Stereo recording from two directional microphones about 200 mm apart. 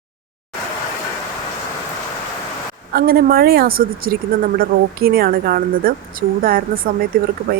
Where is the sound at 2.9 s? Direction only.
50° right (ahead or behind).